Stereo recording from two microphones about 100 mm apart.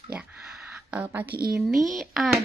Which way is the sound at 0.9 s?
15° right (ahead or behind).